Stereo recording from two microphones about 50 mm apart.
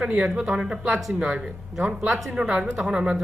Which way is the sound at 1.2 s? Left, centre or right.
Centre.